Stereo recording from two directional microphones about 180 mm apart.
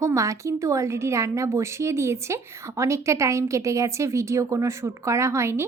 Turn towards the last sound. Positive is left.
turn(degrees=-15)  # may be behind; listen again after turning